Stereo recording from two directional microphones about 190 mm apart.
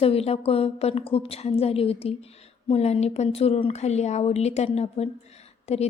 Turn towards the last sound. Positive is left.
turn(degrees=35)  # may be behind; listen again after turning